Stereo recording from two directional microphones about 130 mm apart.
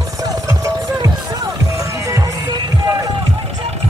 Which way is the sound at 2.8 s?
30° right (ahead or behind).